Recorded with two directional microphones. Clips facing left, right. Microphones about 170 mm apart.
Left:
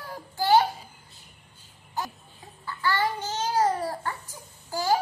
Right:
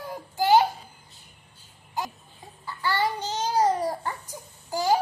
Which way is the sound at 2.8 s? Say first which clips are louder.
Even; 15° right (ahead or behind).